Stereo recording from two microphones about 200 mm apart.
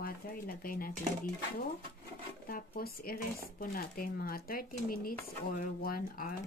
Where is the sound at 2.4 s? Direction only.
45° left (ahead or behind).